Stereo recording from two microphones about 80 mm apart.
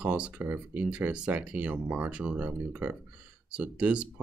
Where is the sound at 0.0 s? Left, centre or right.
Centre.